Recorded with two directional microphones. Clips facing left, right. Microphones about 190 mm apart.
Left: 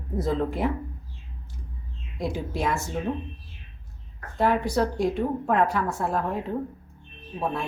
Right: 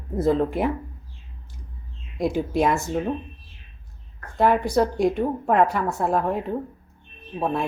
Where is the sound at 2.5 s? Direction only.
55° right (ahead or behind).